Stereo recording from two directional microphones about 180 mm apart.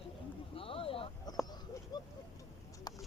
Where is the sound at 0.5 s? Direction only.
30° left (ahead or behind).